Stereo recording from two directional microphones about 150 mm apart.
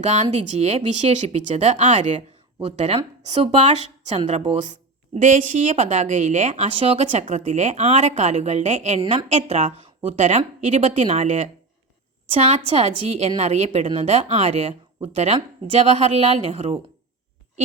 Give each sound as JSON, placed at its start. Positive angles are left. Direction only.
{"t": 0.0, "sound": "a woman's voice", "side_deg": -50}